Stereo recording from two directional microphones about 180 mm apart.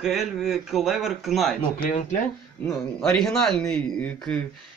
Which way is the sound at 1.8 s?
45° left (ahead or behind).